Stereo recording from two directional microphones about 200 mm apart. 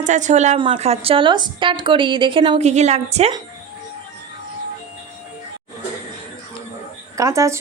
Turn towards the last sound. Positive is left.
turn(degrees=-15)  # may be behind; listen again after turning